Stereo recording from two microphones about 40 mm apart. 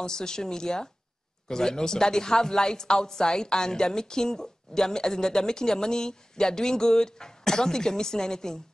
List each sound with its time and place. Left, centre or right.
0.0 s speech: centre